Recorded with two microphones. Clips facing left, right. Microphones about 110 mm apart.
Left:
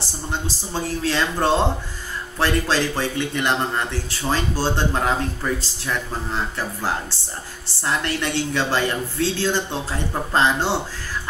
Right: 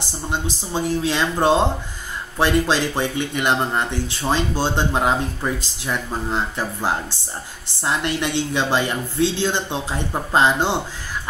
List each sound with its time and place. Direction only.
0.3 s speech: 20° right (ahead or behind)